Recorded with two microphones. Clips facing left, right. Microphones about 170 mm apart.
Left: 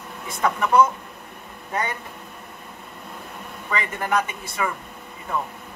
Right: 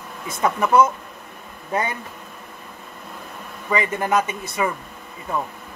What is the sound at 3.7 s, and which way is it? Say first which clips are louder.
A man's voice: right 4 dB; 20° right (ahead or behind).